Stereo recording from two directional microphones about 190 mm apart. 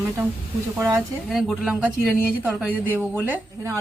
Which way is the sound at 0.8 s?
15° right (ahead or behind).